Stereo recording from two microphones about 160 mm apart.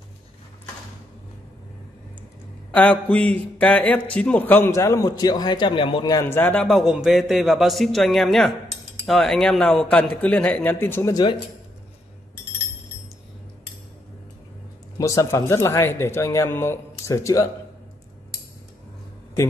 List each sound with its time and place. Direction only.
2.7 s a man's voice: 10° left (ahead or behind)
15.0 s speech: 20° left (ahead or behind)